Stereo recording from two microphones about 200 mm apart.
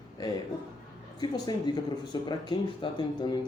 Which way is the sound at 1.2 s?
20° left (ahead or behind).